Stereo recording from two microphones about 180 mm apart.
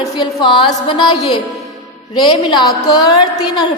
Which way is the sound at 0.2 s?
25° left (ahead or behind).